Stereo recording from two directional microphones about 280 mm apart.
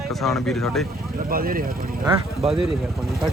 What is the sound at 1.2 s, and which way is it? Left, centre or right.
Speech, right.